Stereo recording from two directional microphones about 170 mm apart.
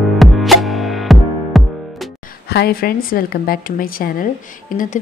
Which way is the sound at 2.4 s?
70° left (ahead or behind).